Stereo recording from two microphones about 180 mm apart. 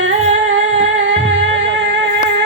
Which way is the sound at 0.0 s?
90° right.